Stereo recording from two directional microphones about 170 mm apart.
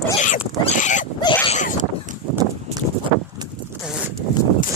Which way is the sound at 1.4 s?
45° left (ahead or behind).